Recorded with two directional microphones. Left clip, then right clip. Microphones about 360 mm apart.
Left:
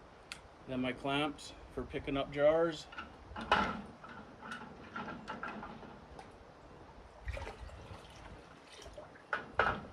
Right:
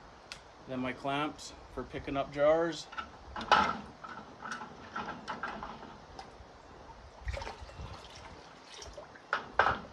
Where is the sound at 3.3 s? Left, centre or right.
Centre.